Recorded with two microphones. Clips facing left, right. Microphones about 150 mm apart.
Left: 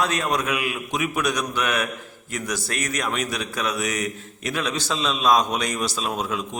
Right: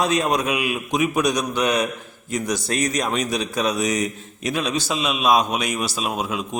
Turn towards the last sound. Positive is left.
turn(degrees=-15)  # may be behind; listen again after turning